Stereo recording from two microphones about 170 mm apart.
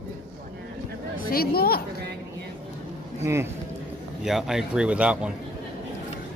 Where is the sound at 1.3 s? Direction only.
65° left (ahead or behind).